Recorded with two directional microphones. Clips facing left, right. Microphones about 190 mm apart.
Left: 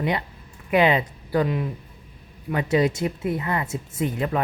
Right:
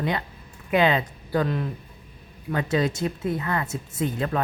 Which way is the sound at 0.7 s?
15° left (ahead or behind).